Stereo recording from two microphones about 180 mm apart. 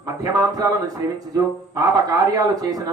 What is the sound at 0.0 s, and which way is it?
Speech, 20° right (ahead or behind).